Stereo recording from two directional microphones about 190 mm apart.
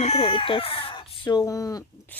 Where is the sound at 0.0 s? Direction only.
30° left (ahead or behind).